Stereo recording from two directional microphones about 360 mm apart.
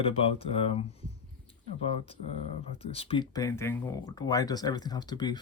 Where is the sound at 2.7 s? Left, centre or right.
Centre.